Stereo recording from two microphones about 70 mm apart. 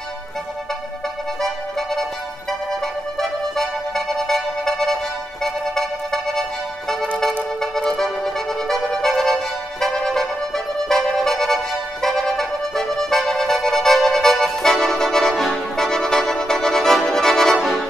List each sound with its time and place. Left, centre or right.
1.4 s music: centre
7.6 s music: centre